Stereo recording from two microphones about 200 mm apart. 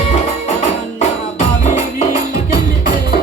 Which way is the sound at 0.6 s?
35° left (ahead or behind).